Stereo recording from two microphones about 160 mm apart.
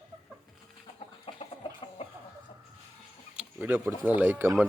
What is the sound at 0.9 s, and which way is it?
Chicken, 40° left (ahead or behind).